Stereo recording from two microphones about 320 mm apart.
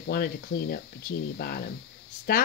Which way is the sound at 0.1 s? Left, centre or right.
Left.